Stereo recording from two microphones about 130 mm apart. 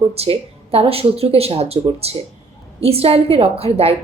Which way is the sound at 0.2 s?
50° right (ahead or behind).